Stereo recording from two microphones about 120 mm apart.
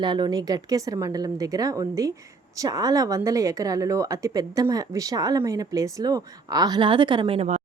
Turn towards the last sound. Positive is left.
turn(degrees=-50)  # may be behind; listen again after turning